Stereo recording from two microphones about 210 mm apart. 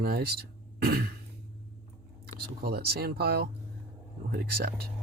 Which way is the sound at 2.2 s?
50° right (ahead or behind).